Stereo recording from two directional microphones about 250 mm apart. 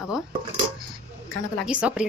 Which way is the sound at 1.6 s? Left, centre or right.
Centre.